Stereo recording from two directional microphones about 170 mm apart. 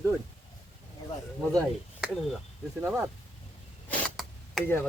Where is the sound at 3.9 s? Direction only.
Centre (ahead or behind).